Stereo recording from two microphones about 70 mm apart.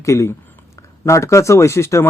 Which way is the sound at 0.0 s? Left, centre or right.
Left.